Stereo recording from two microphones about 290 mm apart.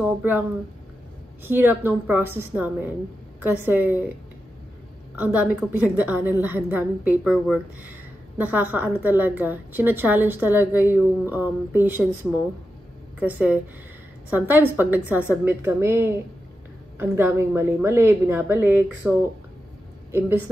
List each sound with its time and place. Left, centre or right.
0.0 s a woman's voice: centre
5.1 s a woman's voice: centre